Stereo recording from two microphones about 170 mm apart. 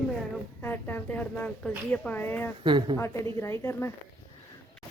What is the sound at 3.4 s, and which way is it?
Speech, 15° left (ahead or behind).